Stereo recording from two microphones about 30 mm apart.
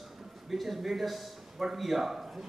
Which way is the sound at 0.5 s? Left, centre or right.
Centre.